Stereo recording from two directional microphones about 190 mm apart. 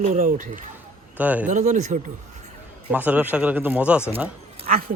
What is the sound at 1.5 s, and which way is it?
Speech, 40° right (ahead or behind).